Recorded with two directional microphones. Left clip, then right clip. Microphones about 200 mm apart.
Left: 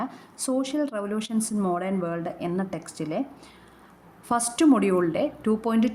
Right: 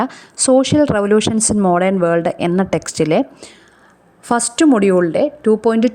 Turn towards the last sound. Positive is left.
turn(degrees=-35)  # may be behind; listen again after turning